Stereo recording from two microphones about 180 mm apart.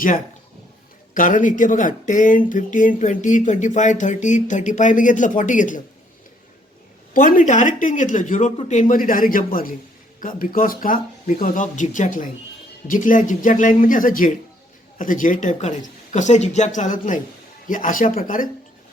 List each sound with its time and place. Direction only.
1.1 s speech: 45° left (ahead or behind)
7.1 s speech: 50° left (ahead or behind)